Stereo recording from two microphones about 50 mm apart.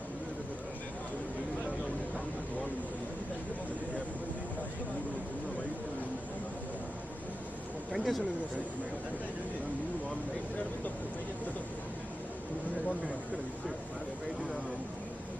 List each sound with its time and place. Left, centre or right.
7.9 s speech: centre